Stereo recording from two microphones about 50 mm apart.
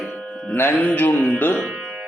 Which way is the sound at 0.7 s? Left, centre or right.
Left.